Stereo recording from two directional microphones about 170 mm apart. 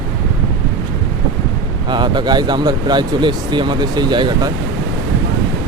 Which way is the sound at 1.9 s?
25° right (ahead or behind).